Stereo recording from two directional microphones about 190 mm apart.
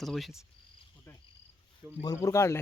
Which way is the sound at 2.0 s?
20° left (ahead or behind).